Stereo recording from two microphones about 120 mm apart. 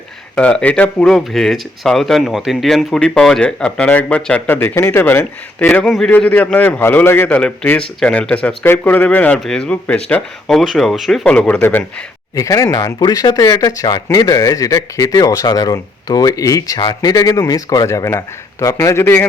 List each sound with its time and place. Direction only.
0.3 s speech: 10° left (ahead or behind)
10.4 s speech: centre (ahead or behind)
12.4 s speech: 30° left (ahead or behind)